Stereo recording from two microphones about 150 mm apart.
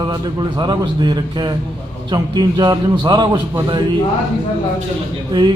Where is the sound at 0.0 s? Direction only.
30° right (ahead or behind).